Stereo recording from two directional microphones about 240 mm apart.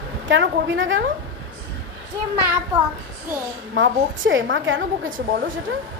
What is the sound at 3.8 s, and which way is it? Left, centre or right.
A woman's voice, right.